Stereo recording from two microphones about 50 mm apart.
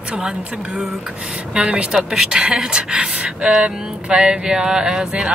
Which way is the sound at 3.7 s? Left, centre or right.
Centre.